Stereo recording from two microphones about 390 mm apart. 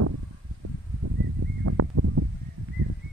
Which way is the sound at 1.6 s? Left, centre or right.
Right.